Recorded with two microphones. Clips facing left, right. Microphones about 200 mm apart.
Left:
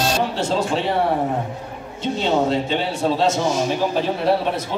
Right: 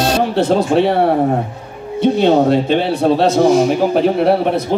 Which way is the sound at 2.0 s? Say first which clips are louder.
Right 8 dB; 60° right (ahead or behind).